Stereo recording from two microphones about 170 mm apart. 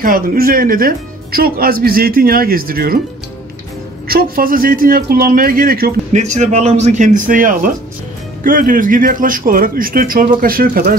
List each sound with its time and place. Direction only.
0.0 s speech: 55° right (ahead or behind)
4.1 s speech: 60° right (ahead or behind)
6.1 s speech: 45° right (ahead or behind)